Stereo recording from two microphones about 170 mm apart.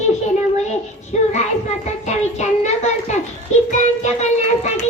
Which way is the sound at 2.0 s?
45° left (ahead or behind).